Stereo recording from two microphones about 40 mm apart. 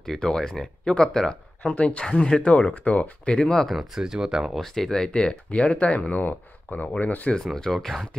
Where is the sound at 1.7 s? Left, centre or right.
Left.